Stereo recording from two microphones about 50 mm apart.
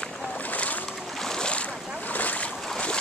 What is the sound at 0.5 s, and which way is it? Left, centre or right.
Boat, left.